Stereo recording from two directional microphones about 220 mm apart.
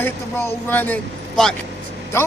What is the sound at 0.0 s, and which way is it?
Speech, 10° left (ahead or behind).